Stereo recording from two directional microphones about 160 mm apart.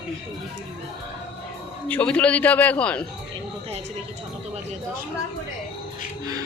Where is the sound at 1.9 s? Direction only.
10° left (ahead or behind).